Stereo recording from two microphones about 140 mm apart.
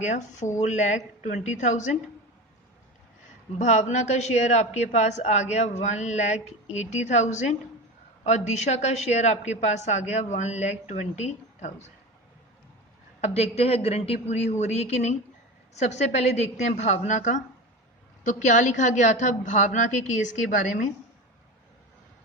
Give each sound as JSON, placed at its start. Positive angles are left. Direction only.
{"t": 0.0, "sound": "a woman's voice", "side_deg": 60}
{"t": 3.6, "sound": "a woman's voice", "side_deg": 60}
{"t": 13.2, "sound": "a woman's voice", "side_deg": 50}